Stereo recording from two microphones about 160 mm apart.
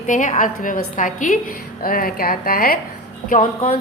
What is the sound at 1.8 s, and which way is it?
Speech, 65° left (ahead or behind).